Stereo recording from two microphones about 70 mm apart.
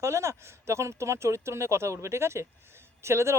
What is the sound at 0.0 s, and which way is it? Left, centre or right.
Speech, right.